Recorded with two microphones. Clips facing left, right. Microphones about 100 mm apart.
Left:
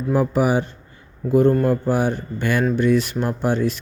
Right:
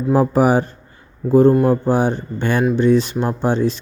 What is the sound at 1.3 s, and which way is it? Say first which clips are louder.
Speech: right 4 dB; 30° right (ahead or behind).